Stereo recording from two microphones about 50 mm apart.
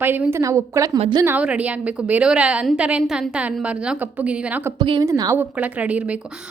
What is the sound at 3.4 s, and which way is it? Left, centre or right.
A woman's voice, right.